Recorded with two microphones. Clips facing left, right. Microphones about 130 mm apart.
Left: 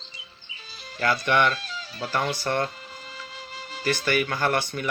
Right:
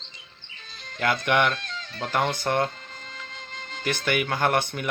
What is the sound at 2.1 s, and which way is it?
Speech, 55° right (ahead or behind).